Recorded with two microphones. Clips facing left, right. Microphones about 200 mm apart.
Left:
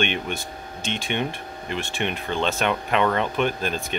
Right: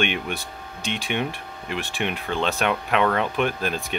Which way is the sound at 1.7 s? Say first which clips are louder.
Even; centre (ahead or behind).